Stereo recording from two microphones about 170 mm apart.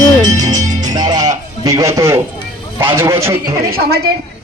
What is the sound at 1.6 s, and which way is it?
Speech, 20° right (ahead or behind).